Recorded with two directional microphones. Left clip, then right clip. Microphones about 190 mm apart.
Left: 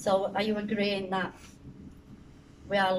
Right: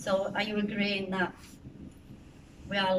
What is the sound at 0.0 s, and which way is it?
A woman's voice, 30° left (ahead or behind).